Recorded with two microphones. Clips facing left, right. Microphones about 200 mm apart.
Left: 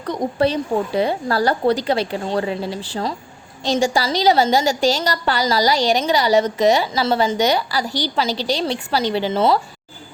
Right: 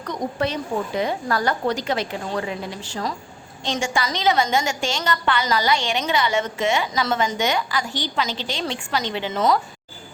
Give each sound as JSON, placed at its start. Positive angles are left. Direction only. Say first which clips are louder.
{"t": 0.0, "sound": "a woman's voice", "louder": "left 6 dB", "side_deg": 30}